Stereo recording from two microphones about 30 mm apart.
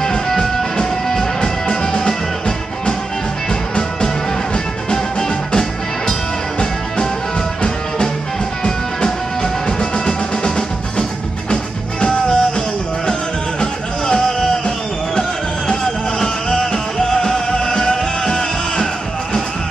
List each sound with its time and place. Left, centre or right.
0.0 s music: centre
8.6 s music: left
11.5 s music: left
15.8 s music: centre